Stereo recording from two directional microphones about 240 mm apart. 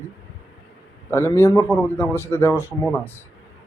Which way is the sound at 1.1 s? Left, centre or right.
Centre.